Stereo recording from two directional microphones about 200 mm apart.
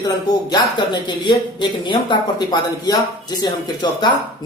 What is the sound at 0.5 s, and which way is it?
A man's voice, 20° left (ahead or behind).